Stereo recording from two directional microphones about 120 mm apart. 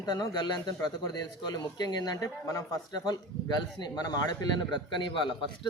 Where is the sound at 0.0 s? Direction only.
35° left (ahead or behind).